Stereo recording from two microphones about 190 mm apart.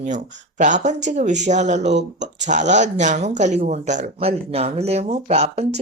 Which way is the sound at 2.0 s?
70° right (ahead or behind).